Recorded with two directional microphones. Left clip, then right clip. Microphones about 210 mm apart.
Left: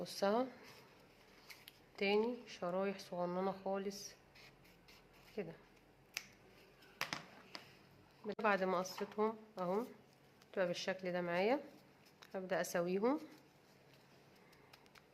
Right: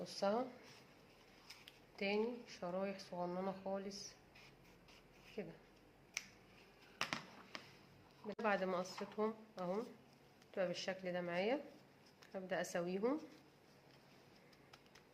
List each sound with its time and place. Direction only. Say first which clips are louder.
0.0 s speech: left 3 dB; 40° left (ahead or behind)
2.0 s speech: left 4 dB; 35° left (ahead or behind)
5.4 s speech: left 4 dB; 35° left (ahead or behind)
7.0 s a sound: even; 15° right (ahead or behind)
8.3 s speech: left 3 dB; 30° left (ahead or behind)